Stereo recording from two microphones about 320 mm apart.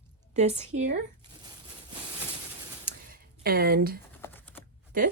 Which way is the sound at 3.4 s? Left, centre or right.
Right.